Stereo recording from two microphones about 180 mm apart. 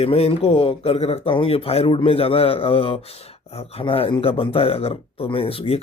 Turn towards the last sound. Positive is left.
turn(degrees=30)  # may be behind; listen again after turning